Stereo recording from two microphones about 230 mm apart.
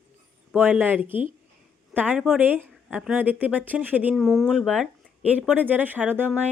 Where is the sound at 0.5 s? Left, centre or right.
Centre.